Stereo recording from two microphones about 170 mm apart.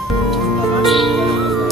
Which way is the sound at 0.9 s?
Centre (ahead or behind).